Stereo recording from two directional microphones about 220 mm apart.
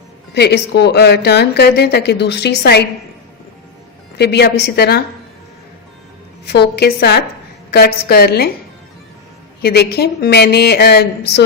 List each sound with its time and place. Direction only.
0.3 s a woman's voice: 50° left (ahead or behind)
4.2 s a woman's voice: 50° left (ahead or behind)
6.4 s a woman's voice: 50° left (ahead or behind)
9.6 s a woman's voice: 45° left (ahead or behind)